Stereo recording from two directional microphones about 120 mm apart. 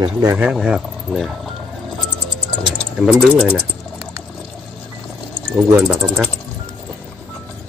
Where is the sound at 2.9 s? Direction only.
Centre (ahead or behind).